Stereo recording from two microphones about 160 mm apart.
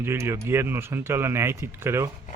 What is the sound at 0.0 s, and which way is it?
Speech, 15° right (ahead or behind).